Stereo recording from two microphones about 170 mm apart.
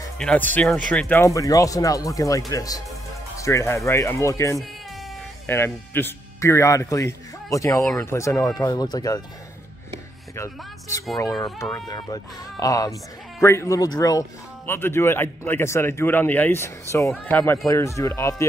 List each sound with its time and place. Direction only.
0.2 s speech: 5° left (ahead or behind)
1.2 s speech: 20° left (ahead or behind)
10.3 s speech: 20° left (ahead or behind)